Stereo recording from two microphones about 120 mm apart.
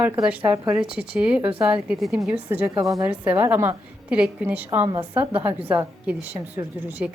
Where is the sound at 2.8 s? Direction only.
25° right (ahead or behind).